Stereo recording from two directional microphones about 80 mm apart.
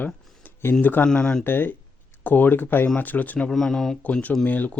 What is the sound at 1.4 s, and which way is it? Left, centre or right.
Speech, left.